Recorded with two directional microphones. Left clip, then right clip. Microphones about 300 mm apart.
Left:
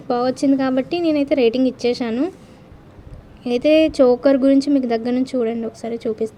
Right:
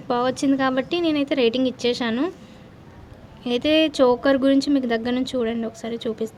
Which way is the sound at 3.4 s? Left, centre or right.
Centre.